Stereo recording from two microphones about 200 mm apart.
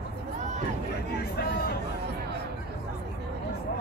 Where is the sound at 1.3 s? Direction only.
50° left (ahead or behind).